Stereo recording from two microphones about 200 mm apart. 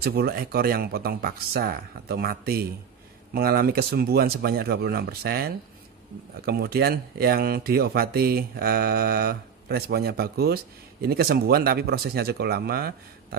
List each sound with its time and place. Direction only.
0.0 s speech: 50° right (ahead or behind)